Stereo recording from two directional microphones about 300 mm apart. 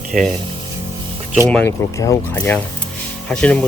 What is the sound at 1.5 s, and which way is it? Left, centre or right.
Speech, centre.